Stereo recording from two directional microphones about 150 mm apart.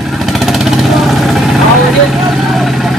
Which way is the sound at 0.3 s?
Centre (ahead or behind).